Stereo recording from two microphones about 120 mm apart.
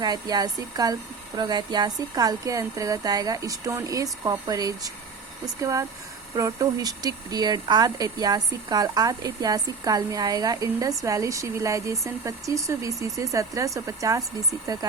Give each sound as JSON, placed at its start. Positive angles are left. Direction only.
{"t": 0.0, "sound": "speech", "side_deg": -35}